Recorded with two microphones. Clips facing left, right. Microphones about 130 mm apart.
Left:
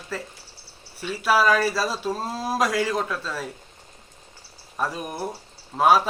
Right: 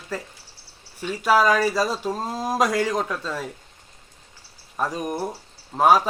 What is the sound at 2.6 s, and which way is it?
Speech, 5° left (ahead or behind).